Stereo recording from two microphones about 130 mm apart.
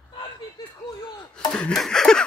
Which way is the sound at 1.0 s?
35° left (ahead or behind).